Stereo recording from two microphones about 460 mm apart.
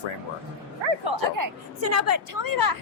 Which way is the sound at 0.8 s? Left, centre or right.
Right.